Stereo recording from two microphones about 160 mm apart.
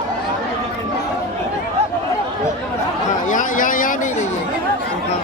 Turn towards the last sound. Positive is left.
turn(degrees=60)  # may be behind; listen again after turning